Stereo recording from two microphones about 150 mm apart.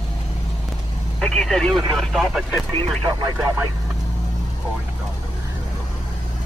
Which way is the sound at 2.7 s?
35° right (ahead or behind).